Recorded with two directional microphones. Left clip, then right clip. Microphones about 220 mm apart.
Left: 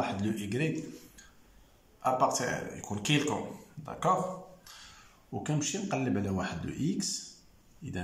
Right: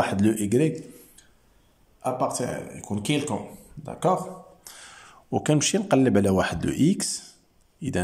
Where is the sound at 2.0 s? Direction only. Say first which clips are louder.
Right 1 dB; 15° right (ahead or behind); by 7.2 s 40° right (ahead or behind).